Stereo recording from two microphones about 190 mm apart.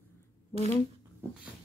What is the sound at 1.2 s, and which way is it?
Dog, 15° right (ahead or behind).